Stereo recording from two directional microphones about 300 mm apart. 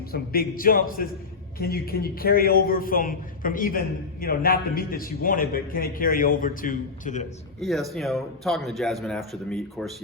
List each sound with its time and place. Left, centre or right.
0.1 s a man's voice: left
7.6 s a man's voice: centre